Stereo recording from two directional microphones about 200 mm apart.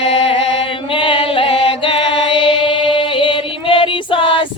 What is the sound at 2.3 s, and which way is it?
Singing, 25° left (ahead or behind).